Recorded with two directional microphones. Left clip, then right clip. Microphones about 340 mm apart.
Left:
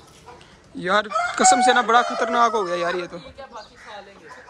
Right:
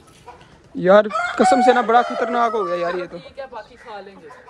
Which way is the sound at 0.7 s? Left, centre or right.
Centre.